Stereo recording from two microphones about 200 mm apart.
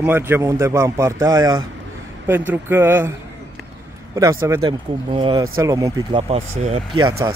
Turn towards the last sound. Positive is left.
turn(degrees=-30)  # may be behind; listen again after turning